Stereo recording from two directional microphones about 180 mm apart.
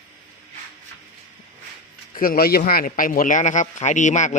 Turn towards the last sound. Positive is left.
turn(degrees=40)  # may be behind; listen again after turning